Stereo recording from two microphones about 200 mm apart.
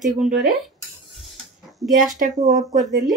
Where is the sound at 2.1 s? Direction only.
35° right (ahead or behind).